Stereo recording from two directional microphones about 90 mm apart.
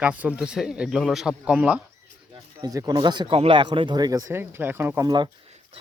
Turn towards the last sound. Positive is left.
turn(degrees=-55)  # may be behind; listen again after turning